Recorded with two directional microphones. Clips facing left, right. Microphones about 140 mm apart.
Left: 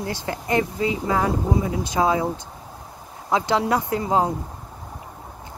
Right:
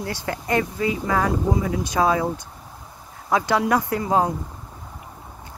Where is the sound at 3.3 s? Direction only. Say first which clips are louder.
Right 1 dB; 20° left (ahead or behind).